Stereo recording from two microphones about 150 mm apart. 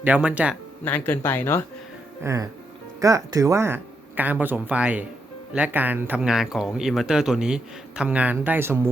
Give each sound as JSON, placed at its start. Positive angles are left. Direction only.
{"t": 0.0, "sound": "speech", "side_deg": -10}
{"t": 0.9, "sound": "speech", "side_deg": 10}
{"t": 2.2, "sound": "speech", "side_deg": -20}